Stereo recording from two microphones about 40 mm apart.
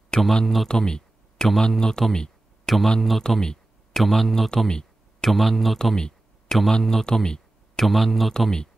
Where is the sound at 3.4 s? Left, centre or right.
Centre.